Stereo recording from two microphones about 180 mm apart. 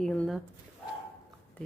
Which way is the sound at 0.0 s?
5° left (ahead or behind).